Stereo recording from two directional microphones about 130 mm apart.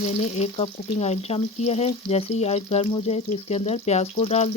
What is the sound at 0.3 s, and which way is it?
Speech, 55° left (ahead or behind).